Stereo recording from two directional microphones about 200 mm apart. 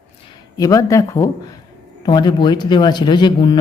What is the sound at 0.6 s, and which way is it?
Speech, 15° left (ahead or behind).